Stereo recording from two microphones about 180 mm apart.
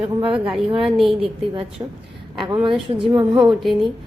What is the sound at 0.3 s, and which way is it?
Speech, centre (ahead or behind).